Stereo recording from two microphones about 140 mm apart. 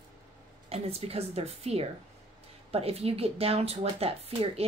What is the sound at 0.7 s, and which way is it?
Speech, 45° right (ahead or behind).